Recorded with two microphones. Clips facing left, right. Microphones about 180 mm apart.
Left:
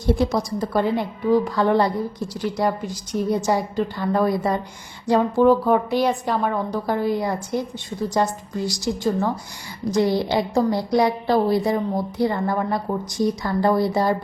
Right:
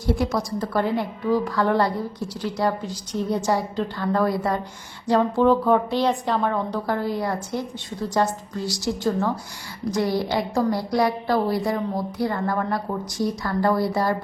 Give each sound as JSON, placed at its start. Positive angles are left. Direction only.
{"t": 0.0, "sound": "a woman's voice", "side_deg": 20}